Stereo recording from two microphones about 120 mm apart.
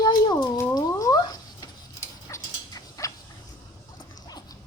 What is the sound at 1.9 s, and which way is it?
Dog, 25° left (ahead or behind).